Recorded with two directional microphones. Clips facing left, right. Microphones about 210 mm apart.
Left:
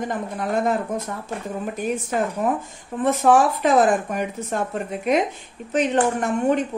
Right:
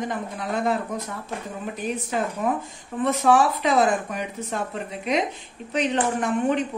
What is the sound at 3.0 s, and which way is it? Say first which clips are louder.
A woman's voice: left 2 dB; 50° left (ahead or behind).